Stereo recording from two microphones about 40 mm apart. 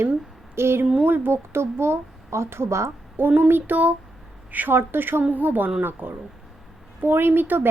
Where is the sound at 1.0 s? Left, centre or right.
Right.